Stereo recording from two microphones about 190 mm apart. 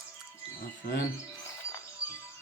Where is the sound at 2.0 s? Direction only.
5° right (ahead or behind).